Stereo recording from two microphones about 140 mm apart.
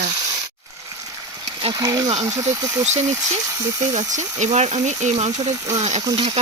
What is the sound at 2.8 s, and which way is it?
Speech, 55° right (ahead or behind).